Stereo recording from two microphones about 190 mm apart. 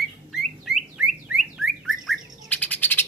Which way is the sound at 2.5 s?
10° left (ahead or behind).